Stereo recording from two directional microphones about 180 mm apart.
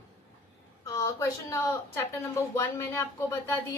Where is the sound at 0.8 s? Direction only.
15° left (ahead or behind).